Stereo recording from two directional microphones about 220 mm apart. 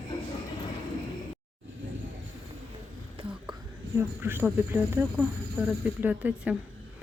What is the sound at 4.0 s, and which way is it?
Speech, 10° right (ahead or behind).